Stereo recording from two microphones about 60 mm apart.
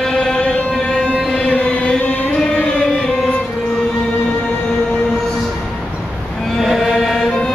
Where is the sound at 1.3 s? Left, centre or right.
Centre.